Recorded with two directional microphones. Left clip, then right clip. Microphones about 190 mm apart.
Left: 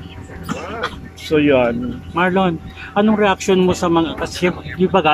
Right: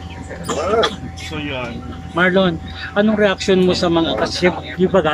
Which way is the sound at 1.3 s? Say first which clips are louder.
Left 12 dB; 50° left (ahead or behind).